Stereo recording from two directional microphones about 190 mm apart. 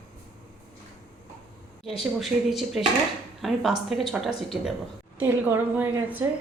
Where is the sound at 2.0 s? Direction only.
Centre (ahead or behind).